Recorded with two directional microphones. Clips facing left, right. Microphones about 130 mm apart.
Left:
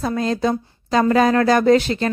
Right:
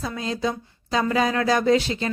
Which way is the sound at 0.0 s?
55° left (ahead or behind).